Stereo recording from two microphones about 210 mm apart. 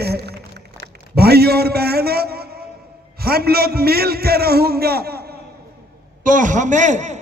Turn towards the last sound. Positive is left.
turn(degrees=-35)  # may be behind; listen again after turning